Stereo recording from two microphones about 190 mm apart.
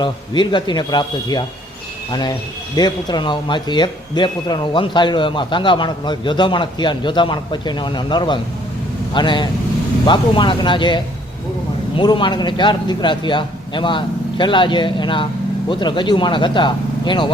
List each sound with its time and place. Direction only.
0.0 s speech: 25° left (ahead or behind)
2.7 s speech: 20° left (ahead or behind)